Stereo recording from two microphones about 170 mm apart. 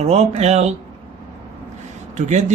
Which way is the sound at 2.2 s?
45° right (ahead or behind).